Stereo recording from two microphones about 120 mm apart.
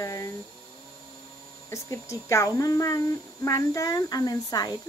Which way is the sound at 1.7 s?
25° left (ahead or behind).